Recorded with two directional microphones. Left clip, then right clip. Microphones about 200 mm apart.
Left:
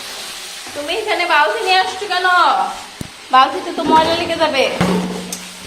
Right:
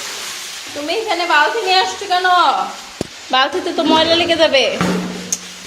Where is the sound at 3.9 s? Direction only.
45° right (ahead or behind).